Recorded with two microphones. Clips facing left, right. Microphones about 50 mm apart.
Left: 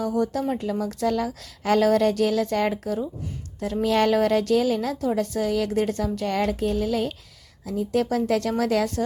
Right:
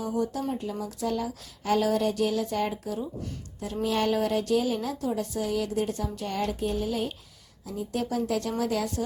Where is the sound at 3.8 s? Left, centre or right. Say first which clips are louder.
Left 6 dB; left.